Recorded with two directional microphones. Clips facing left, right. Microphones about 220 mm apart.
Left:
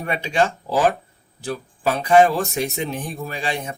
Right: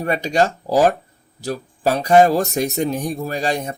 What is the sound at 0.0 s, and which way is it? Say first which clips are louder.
Speech: right 3 dB; 40° right (ahead or behind).